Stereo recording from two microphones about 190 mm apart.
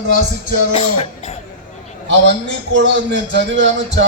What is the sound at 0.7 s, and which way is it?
Music, 35° left (ahead or behind).